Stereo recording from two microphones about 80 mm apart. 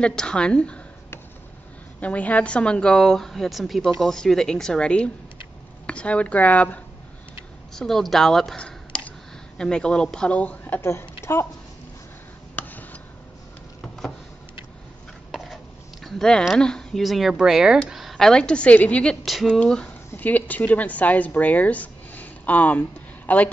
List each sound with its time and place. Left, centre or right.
0.0 s a woman's voice: centre
2.0 s a woman's voice: centre
7.7 s a woman's voice: centre
10.8 s speech: left
12.5 s a sound: left
13.7 s a sound: centre
15.3 s a sound: centre
16.5 s a woman's voice: centre
19.2 s speech: centre
19.6 s a woman's voice: centre